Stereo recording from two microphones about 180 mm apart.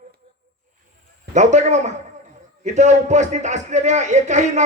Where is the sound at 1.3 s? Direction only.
40° right (ahead or behind).